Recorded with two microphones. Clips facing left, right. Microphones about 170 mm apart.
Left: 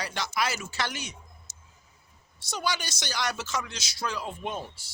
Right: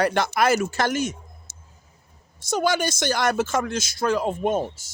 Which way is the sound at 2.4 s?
50° right (ahead or behind).